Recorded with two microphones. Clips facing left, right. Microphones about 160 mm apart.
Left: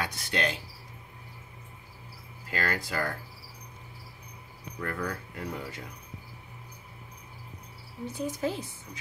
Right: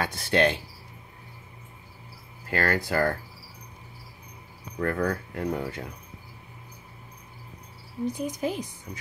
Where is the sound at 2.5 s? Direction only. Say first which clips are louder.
Right 6 dB; 55° right (ahead or behind).